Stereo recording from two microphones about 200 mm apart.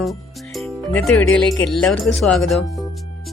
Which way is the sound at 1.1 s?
5° left (ahead or behind).